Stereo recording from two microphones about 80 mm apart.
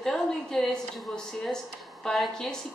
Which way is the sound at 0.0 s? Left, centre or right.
Centre.